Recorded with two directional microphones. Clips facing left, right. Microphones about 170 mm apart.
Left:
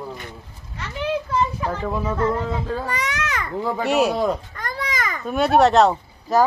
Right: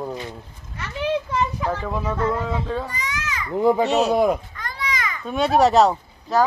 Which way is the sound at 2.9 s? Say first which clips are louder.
Left 4 dB; 70° left (ahead or behind).